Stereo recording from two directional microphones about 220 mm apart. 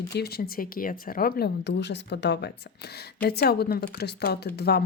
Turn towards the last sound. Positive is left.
turn(degrees=45)  # may be behind; listen again after turning